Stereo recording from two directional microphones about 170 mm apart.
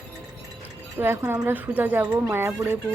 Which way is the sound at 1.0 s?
15° right (ahead or behind).